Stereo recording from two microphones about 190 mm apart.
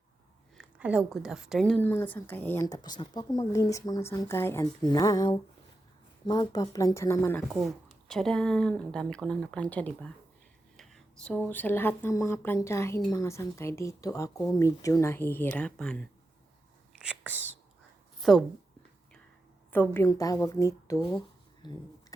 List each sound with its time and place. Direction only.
0.5 s a woman's voice: 5° right (ahead or behind); by 7.4 s 10° left (ahead or behind)
7.5 s a woman's voice: centre (ahead or behind)
17.0 s speech: 5° right (ahead or behind)
18.2 s a woman's voice: centre (ahead or behind)
19.7 s a woman's voice: 10° left (ahead or behind)
21.1 s a sound: 25° left (ahead or behind)